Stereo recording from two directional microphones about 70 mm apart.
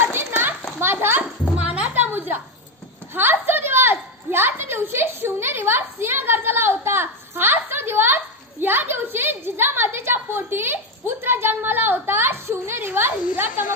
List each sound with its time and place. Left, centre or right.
0.3 s children playing: right
1.6 s music: centre
2.0 s a sound: right
3.2 s a woman's voice: right